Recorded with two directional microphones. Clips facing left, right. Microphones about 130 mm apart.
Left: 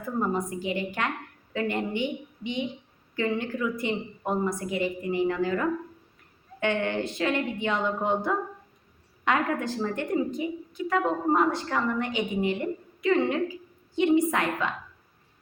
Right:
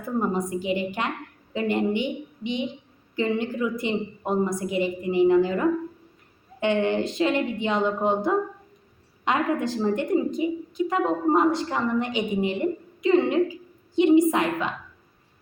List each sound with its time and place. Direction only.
0.2 s a woman's voice: 20° right (ahead or behind)